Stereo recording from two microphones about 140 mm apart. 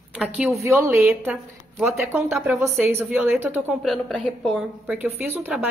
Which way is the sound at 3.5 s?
Centre (ahead or behind).